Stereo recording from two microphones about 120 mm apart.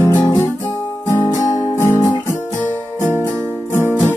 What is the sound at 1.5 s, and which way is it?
Guitar, 25° left (ahead or behind).